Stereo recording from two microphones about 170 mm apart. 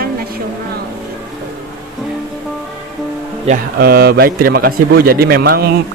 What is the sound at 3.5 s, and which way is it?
A man's voice, 60° right (ahead or behind).